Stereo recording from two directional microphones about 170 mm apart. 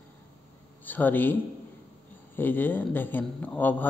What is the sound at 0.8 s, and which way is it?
A man's voice, 10° left (ahead or behind).